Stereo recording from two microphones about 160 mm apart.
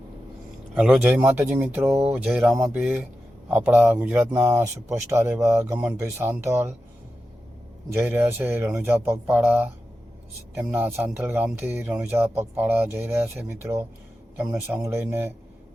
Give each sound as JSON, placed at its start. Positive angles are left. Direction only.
{"t": 1.0, "sound": "speech", "side_deg": -10}
{"t": 7.9, "sound": "speech", "side_deg": -15}